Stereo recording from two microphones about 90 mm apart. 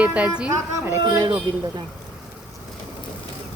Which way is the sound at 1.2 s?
50° right (ahead or behind).